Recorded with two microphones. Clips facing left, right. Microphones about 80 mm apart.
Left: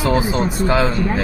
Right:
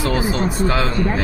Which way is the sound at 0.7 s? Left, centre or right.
Left.